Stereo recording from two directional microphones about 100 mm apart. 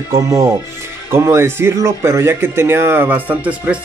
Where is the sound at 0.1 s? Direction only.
30° right (ahead or behind).